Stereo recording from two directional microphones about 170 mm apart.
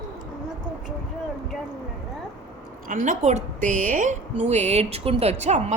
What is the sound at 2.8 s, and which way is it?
A woman's voice, 50° right (ahead or behind).